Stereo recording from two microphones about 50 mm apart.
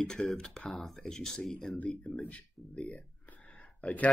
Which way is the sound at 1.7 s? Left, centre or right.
Left.